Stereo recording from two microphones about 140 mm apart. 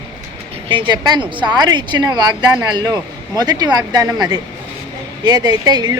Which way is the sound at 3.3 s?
30° right (ahead or behind).